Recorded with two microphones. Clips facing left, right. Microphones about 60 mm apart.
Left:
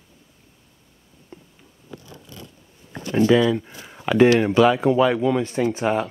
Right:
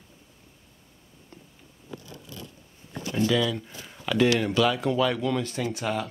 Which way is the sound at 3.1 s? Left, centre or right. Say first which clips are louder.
Left 8 dB; left.